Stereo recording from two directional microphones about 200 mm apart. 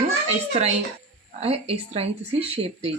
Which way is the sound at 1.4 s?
30° right (ahead or behind).